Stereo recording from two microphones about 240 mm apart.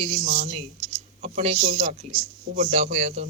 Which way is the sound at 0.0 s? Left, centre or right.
Right.